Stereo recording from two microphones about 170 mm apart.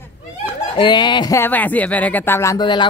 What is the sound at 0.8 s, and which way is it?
Speech, 25° left (ahead or behind).